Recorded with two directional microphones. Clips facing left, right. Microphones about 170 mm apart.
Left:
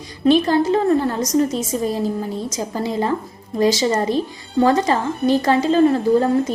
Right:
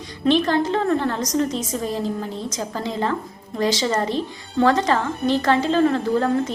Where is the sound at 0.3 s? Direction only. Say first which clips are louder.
Left 4 dB; 10° left (ahead or behind).